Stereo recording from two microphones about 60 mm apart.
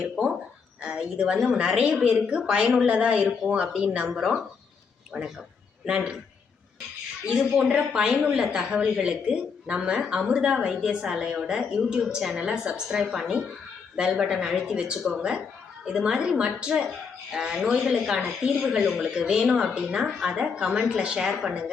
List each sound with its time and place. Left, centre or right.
0.0 s a woman's voice: centre
7.5 s a woman's voice: centre